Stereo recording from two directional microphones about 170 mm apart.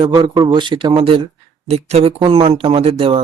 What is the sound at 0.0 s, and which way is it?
Speech, 25° right (ahead or behind).